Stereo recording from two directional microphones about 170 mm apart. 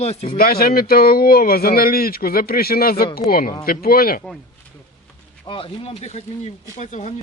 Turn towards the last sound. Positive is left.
turn(degrees=40)  # may be behind; listen again after turning